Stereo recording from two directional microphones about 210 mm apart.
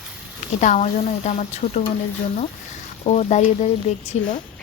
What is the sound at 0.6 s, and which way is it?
A woman's voice, 35° left (ahead or behind).